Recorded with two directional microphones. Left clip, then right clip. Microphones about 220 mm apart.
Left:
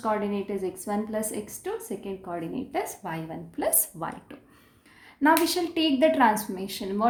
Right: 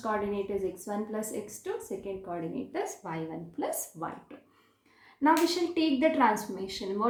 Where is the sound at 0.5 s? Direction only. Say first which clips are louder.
Left 3 dB; 40° left (ahead or behind).